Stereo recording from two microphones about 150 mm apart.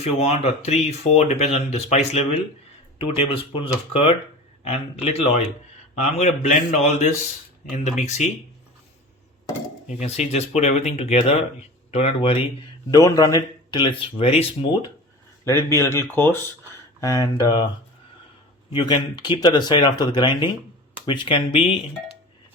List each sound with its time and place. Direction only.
0.0 s speech: 45° left (ahead or behind)
10.0 s speech: 50° left (ahead or behind)
12.9 s speech: 25° left (ahead or behind)
15.4 s speech: 20° left (ahead or behind)
18.7 s speech: 30° left (ahead or behind)